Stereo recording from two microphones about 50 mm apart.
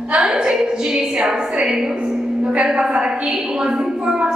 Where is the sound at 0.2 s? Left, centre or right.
Centre.